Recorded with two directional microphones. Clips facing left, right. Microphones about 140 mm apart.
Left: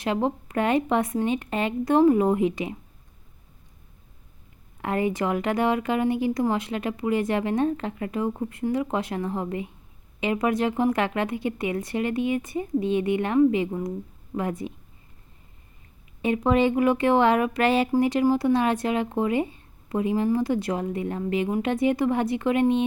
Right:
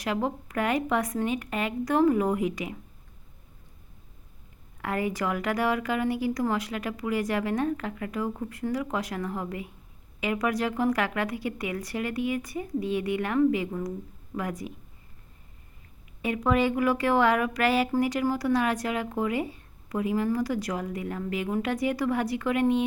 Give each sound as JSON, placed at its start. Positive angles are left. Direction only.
{"t": 0.0, "sound": "speech", "side_deg": 25}
{"t": 4.8, "sound": "speech", "side_deg": 25}
{"t": 16.2, "sound": "speech", "side_deg": 25}